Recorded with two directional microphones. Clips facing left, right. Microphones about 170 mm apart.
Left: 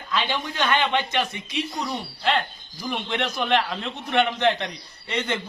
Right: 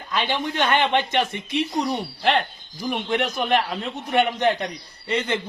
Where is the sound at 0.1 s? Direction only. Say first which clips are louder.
Right 2 dB; 50° right (ahead or behind).